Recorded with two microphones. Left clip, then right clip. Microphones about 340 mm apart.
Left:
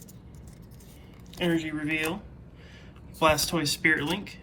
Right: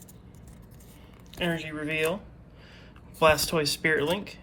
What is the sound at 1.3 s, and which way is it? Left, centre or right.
Speech, centre.